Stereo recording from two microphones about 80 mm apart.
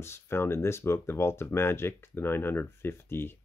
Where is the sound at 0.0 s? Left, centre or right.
Left.